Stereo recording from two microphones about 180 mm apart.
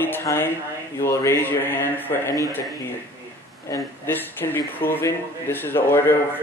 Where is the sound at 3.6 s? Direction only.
15° left (ahead or behind).